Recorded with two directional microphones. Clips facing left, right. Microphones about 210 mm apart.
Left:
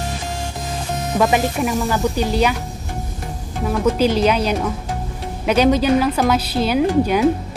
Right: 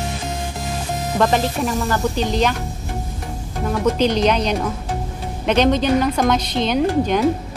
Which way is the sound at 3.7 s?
5° left (ahead or behind).